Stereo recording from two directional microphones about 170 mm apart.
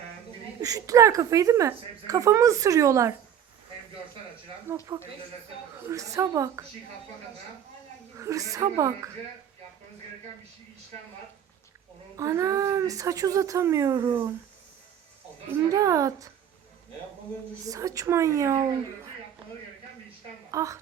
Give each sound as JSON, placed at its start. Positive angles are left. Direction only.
{"t": 0.6, "sound": "speech", "side_deg": -20}
{"t": 4.9, "sound": "a woman's voice", "side_deg": -15}
{"t": 8.1, "sound": "speech", "side_deg": -20}
{"t": 12.1, "sound": "speech", "side_deg": -20}
{"t": 15.7, "sound": "speech", "side_deg": -20}
{"t": 17.7, "sound": "a woman's voice", "side_deg": -20}
{"t": 20.5, "sound": "a woman's voice", "side_deg": -20}